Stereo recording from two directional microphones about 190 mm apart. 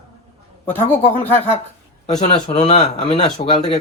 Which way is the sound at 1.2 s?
10° left (ahead or behind).